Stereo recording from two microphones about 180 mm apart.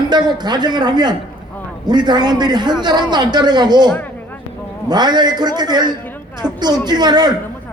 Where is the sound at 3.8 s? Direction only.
10° left (ahead or behind).